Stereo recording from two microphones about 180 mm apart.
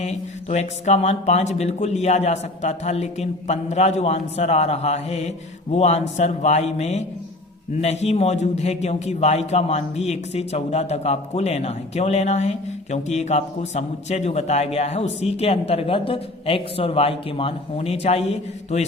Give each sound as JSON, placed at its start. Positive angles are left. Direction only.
{"t": 0.0, "sound": "a man's voice", "side_deg": 40}